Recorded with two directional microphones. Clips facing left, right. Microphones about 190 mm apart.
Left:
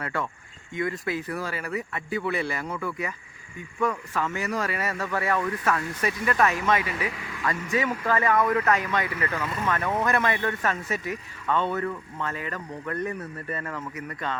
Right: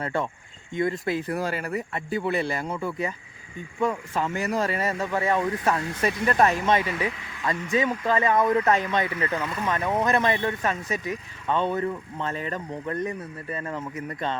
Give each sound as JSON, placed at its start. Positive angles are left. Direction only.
{"t": 0.0, "sound": "speech", "side_deg": -25}
{"t": 1.3, "sound": "speech", "side_deg": -40}